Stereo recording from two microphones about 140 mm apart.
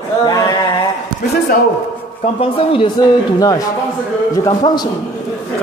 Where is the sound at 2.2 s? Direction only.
40° left (ahead or behind).